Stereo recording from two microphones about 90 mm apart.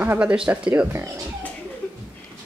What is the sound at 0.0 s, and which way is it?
A child's voice, 15° right (ahead or behind).